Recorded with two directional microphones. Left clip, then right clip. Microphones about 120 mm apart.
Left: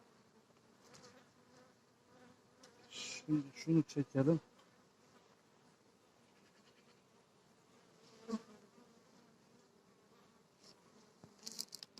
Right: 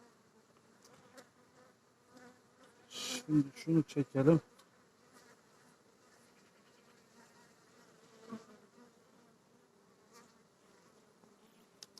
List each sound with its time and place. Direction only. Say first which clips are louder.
0.9 s bee: right 2 dB; 25° right (ahead or behind)
8.0 s bee: left 5 dB; 30° right (ahead or behind)